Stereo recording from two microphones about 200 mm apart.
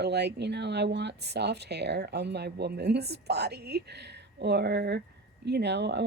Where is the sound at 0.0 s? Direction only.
55° right (ahead or behind).